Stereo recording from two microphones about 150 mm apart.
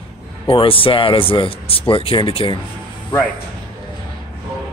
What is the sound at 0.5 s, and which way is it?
Speech, 35° left (ahead or behind).